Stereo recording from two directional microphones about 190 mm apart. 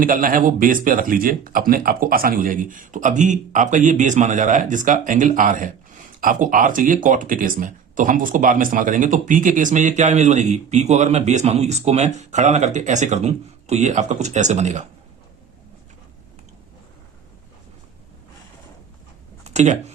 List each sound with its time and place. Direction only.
0.0 s speech: 45° right (ahead or behind)
19.5 s speech: 35° right (ahead or behind)